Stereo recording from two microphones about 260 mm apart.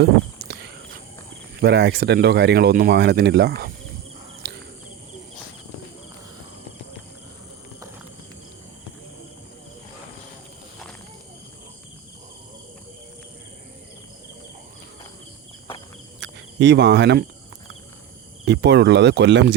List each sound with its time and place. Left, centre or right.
0.0 s cricket: right
1.6 s speech: right
4.4 s cricket: right
16.2 s cricket: right
18.4 s speech: right